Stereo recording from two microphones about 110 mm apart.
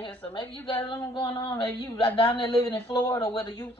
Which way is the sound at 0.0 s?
50° left (ahead or behind).